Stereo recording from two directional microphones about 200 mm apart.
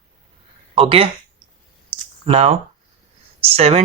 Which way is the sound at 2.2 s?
30° right (ahead or behind).